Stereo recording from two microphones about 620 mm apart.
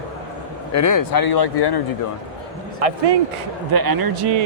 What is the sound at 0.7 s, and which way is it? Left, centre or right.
Speech, left.